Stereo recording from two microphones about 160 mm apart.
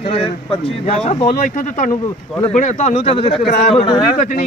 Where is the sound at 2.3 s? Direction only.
5° left (ahead or behind).